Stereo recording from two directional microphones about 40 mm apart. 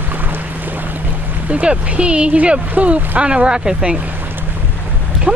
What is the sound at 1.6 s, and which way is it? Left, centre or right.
Speech, right.